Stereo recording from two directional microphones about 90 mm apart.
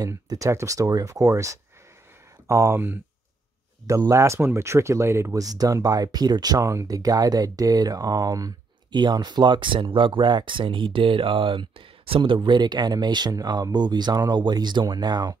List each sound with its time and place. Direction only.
0.0 s speech: 40° right (ahead or behind)
4.1 s speech: 35° right (ahead or behind)
8.9 s speech: 50° right (ahead or behind)